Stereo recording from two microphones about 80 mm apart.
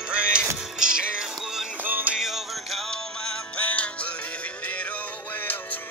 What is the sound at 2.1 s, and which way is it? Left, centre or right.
Music, centre.